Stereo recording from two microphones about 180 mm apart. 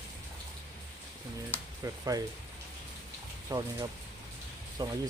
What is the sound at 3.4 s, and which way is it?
Speech, 20° right (ahead or behind).